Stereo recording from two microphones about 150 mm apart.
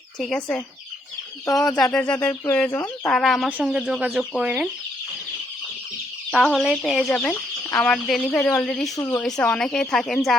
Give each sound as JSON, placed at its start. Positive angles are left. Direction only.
{"t": 0.2, "sound": "speech", "side_deg": 5}
{"t": 1.5, "sound": "speech", "side_deg": 25}
{"t": 1.9, "sound": "speech", "side_deg": 5}
{"t": 3.1, "sound": "speech", "side_deg": 0}
{"t": 6.3, "sound": "speech", "side_deg": 0}
{"t": 9.0, "sound": "speech", "side_deg": 20}
{"t": 9.2, "sound": "speech", "side_deg": 5}